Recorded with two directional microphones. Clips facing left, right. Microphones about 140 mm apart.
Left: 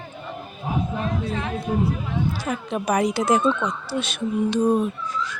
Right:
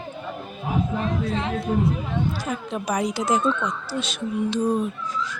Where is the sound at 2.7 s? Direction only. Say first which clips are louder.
Left 4 dB; 60° left (ahead or behind).